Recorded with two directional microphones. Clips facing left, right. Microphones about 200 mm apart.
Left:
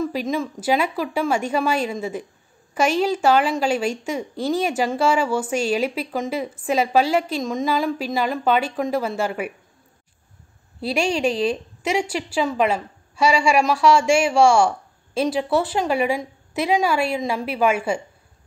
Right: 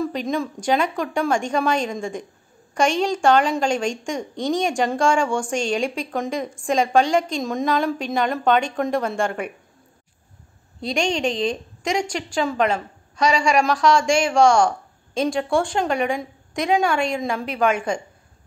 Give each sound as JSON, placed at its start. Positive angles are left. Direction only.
{"t": 0.0, "sound": "a woman's voice", "side_deg": 5}
{"t": 10.8, "sound": "a woman's voice", "side_deg": 5}